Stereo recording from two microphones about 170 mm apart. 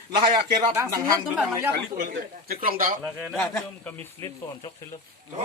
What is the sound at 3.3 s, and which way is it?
Speech, 10° left (ahead or behind).